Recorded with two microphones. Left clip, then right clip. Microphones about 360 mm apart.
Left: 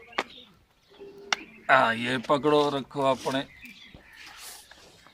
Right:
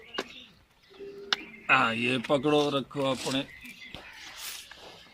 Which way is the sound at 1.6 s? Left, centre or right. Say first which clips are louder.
Left 3 dB; left.